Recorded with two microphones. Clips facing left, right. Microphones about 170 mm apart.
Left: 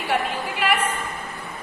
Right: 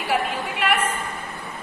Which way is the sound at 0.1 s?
Centre (ahead or behind).